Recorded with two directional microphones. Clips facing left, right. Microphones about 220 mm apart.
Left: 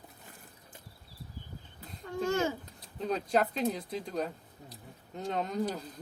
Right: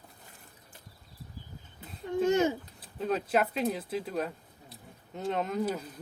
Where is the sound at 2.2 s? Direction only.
20° right (ahead or behind).